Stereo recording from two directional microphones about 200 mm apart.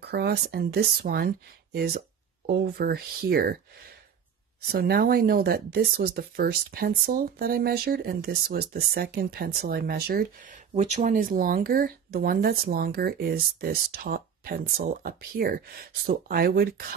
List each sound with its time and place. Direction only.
0.0 s speech: 55° right (ahead or behind)
4.6 s speech: 50° right (ahead or behind)
10.7 s speech: 35° right (ahead or behind)